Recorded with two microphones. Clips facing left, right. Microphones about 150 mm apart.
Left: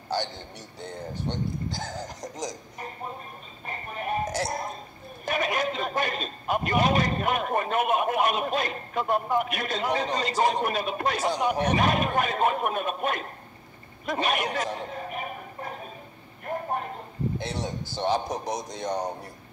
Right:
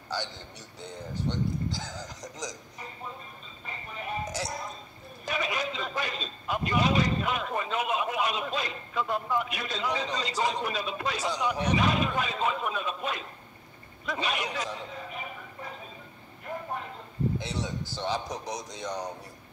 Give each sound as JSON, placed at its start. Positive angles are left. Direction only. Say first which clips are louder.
{"t": 1.2, "sound": "a man's voice", "louder": "right 1 dB", "side_deg": 55}
{"t": 14.0, "sound": "a sound", "louder": "left 5 dB", "side_deg": 55}
{"t": 18.3, "sound": "speech", "louder": "left 5 dB", "side_deg": 50}